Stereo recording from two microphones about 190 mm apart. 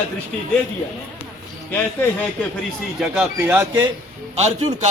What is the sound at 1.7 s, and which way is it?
Speech, 10° left (ahead or behind).